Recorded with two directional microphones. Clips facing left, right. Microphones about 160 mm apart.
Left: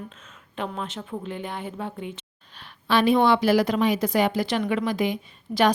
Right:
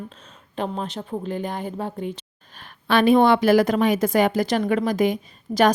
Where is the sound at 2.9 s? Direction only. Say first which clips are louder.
Right 3 dB; 50° right (ahead or behind).